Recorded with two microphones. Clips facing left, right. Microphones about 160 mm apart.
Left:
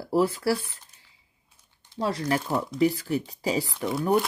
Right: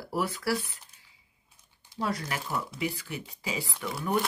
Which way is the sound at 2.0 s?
30° left (ahead or behind).